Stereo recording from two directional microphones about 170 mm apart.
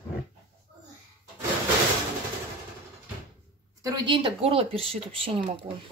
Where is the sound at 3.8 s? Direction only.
25° right (ahead or behind).